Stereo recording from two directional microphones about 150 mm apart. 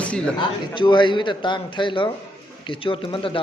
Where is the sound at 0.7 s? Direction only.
30° left (ahead or behind).